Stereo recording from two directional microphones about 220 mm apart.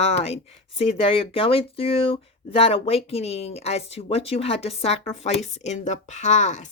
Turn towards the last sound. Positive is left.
turn(degrees=35)  # may be behind; listen again after turning